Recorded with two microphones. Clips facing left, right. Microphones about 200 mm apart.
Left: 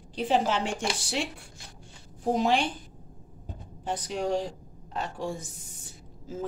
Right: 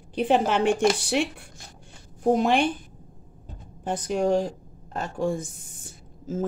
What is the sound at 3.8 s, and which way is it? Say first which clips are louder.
A woman's voice: right 6 dB; 50° right (ahead or behind).